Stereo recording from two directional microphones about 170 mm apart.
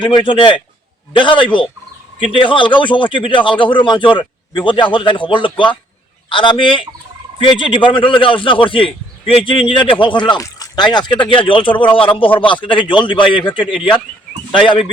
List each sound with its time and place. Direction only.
0.0 s a man's voice: 30° left (ahead or behind)